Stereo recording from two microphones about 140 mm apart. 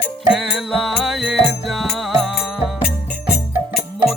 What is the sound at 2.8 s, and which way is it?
Music, 90° left.